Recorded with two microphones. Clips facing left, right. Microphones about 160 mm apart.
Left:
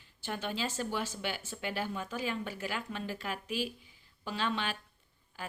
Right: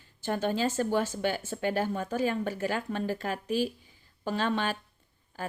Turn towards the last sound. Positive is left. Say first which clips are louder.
# right 6 dB
turn(degrees=-45)  # may be behind; listen again after turning